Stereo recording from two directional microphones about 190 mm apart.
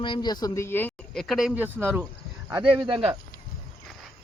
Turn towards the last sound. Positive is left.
turn(degrees=-25)  # may be behind; listen again after turning